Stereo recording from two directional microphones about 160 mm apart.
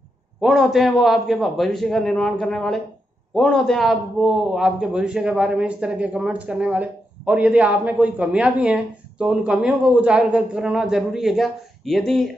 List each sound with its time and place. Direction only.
0.4 s a man's voice: centre (ahead or behind)